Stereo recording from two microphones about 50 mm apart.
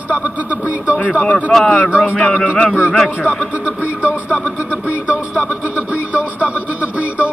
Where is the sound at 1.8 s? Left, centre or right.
Centre.